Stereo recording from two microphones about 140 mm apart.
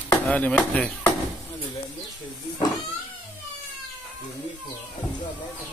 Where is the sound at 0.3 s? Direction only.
10° left (ahead or behind).